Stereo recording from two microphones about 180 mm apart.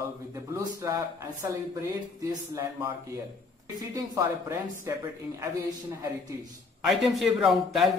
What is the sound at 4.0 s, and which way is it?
Speech, 15° right (ahead or behind).